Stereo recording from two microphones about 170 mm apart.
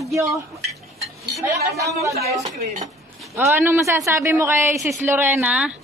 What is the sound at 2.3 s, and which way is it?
Speech, 45° right (ahead or behind).